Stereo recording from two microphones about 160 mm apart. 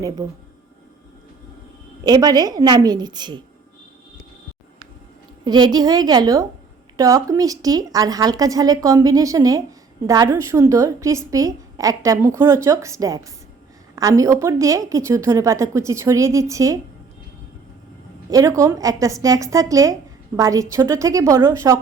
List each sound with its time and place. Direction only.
2.0 s a woman's voice: 25° right (ahead or behind)
5.5 s a woman's voice: 25° right (ahead or behind)
18.3 s a woman's voice: 20° right (ahead or behind)